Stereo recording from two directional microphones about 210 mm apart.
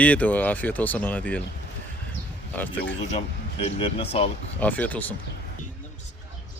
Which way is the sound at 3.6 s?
25° left (ahead or behind).